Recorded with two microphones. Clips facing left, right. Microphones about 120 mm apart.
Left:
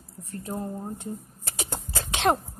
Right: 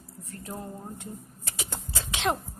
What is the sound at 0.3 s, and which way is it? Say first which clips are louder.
Speech: left 6 dB; 30° left (ahead or behind).